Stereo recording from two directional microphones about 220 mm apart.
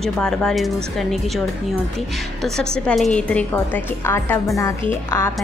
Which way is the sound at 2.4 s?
5° left (ahead or behind).